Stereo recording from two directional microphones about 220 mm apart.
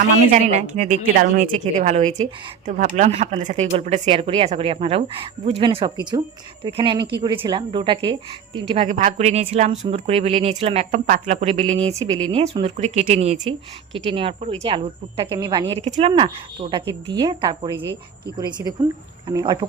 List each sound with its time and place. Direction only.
0.3 s a woman's voice: 35° right (ahead or behind)